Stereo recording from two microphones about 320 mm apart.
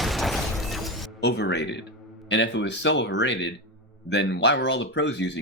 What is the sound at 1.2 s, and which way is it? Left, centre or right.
Speech, left.